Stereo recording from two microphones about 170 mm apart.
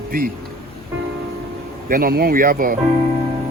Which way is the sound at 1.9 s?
60° right (ahead or behind).